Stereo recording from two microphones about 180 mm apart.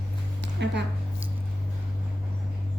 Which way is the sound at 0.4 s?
70° right (ahead or behind).